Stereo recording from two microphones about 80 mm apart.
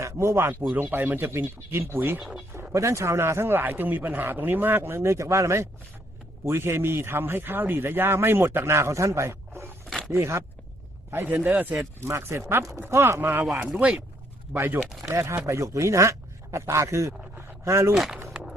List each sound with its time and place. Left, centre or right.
0.0 s speech: right
2.7 s a man's voice: right
11.8 s a man's voice: right
13.6 s speech: centre
14.5 s a man's voice: right
14.8 s speech: centre
15.0 s a man's voice: right
17.9 s speech: centre
18.3 s a sound: centre